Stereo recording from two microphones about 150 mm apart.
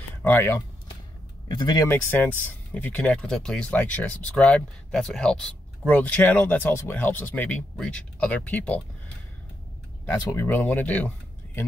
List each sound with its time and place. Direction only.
0.2 s speech: 15° left (ahead or behind)
1.5 s speech: 30° left (ahead or behind)
1.9 s speech: 15° left (ahead or behind)
10.0 s speech: 15° left (ahead or behind)